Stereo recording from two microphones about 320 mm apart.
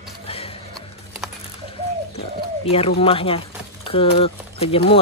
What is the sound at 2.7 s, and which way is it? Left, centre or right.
Speech, centre.